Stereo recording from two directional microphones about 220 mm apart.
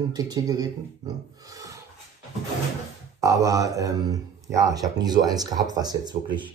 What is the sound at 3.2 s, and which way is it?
Speech, 15° right (ahead or behind).